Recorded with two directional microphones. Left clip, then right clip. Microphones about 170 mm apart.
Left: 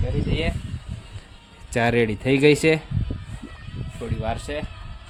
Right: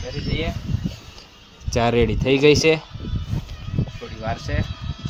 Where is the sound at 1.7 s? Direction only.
Centre (ahead or behind).